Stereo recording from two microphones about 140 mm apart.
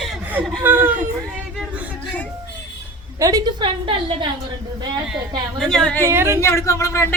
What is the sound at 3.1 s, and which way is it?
A woman's voice, 25° right (ahead or behind).